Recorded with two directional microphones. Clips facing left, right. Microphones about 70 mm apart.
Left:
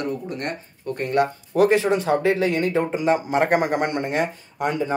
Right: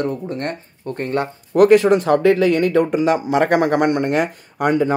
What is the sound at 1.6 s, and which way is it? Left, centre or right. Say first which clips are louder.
Speech: right 6 dB; right.